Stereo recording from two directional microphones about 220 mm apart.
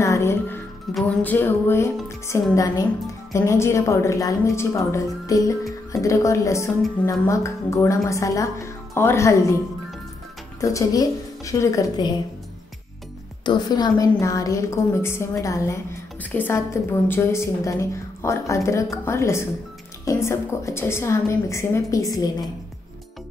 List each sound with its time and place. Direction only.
0.0 s music: 15° left (ahead or behind)
0.9 s a woman's voice: 5° left (ahead or behind)
10.6 s a woman's voice: 15° left (ahead or behind)
13.5 s a woman's voice: 20° left (ahead or behind)